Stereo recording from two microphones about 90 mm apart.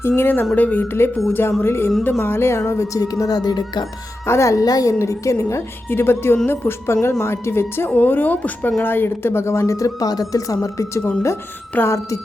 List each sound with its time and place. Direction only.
0.2 s speech: 20° left (ahead or behind); by 3.8 s 50° left (ahead or behind)
4.3 s speech: 35° left (ahead or behind)
11.7 s speech: 25° left (ahead or behind)